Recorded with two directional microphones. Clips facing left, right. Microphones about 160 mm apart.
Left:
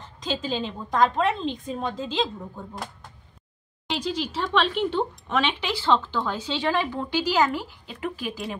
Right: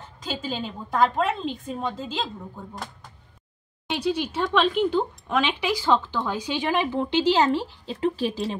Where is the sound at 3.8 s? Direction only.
5° right (ahead or behind).